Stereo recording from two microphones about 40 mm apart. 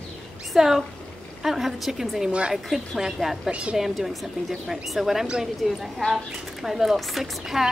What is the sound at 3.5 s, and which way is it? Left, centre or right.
Speech, right.